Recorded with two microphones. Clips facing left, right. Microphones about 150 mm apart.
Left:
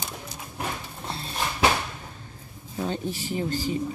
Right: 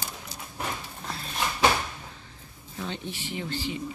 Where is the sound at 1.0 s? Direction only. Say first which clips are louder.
Left 4 dB; 30° left (ahead or behind).